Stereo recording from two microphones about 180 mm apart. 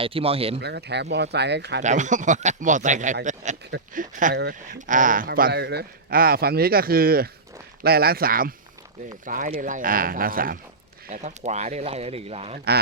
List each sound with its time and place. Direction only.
0.0 s speech: 30° right (ahead or behind)
0.6 s speech: 65° right (ahead or behind)
1.8 s speech: 40° right (ahead or behind)
4.4 s speech: 65° right (ahead or behind)
4.9 s speech: 50° right (ahead or behind)
11.1 s speech: 40° right (ahead or behind)